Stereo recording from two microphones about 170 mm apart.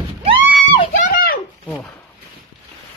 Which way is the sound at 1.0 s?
60° left (ahead or behind).